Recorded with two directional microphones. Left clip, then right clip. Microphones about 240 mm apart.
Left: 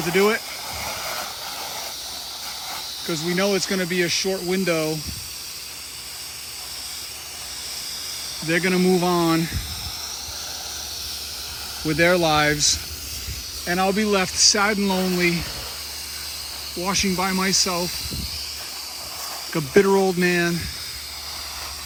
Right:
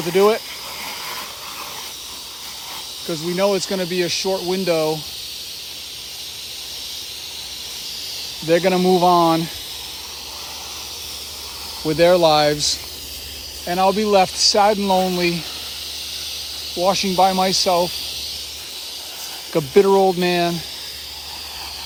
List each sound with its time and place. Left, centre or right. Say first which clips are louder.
0.0 s speech: right 4 dB; centre
3.1 s speech: right 3 dB; centre
8.4 s speech: right 5 dB; centre
11.9 s speech: right 5 dB; centre
16.8 s speech: right 7 dB; centre
17.4 s speech: right 3 dB; centre
19.5 s speech: right 4 dB; centre